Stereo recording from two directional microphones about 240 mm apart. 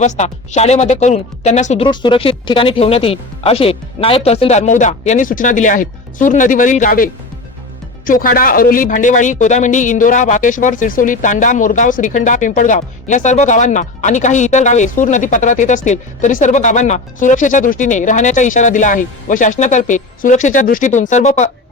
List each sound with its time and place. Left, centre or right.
0.0 s speech: left